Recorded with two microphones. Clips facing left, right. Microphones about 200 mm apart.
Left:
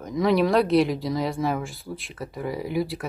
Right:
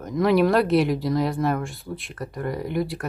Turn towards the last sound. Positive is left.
turn(degrees=0)  # may be behind; listen again after turning